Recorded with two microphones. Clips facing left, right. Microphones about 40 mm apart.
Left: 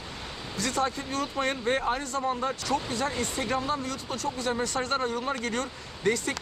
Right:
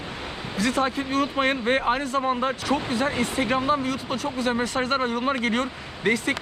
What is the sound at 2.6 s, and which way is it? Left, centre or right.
Speech, centre.